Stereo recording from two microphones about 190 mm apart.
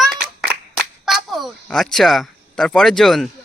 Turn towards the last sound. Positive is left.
turn(degrees=0)  # may be behind; listen again after turning